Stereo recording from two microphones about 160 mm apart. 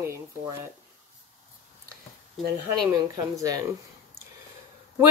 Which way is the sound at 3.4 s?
20° right (ahead or behind).